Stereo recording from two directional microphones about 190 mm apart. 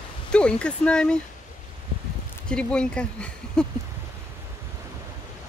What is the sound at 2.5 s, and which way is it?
Speech, 5° left (ahead or behind).